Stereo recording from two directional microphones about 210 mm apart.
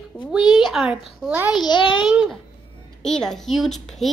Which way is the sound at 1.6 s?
20° left (ahead or behind).